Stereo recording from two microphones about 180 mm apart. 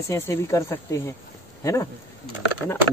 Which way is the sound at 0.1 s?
15° left (ahead or behind).